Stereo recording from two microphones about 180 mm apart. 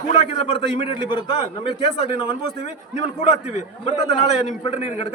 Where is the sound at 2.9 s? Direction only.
40° left (ahead or behind).